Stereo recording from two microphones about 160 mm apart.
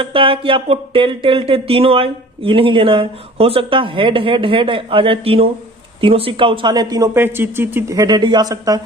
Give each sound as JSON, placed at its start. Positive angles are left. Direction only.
{"t": 0.0, "sound": "speech", "side_deg": -35}